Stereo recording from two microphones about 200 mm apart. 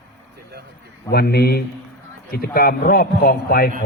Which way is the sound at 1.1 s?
50° left (ahead or behind).